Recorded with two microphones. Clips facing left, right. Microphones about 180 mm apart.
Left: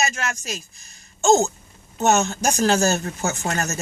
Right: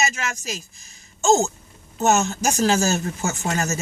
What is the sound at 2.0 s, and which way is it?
Speech, centre (ahead or behind).